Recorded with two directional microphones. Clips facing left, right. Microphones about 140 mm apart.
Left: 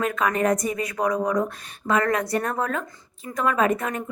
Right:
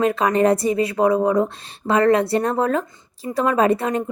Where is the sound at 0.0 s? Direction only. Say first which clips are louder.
Right 6 dB; 30° right (ahead or behind).